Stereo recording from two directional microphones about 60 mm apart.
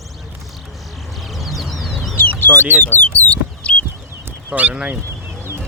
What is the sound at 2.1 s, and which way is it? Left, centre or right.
Chicken, left.